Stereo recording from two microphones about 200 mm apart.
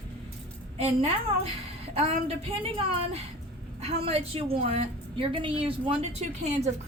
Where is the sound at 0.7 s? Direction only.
30° right (ahead or behind).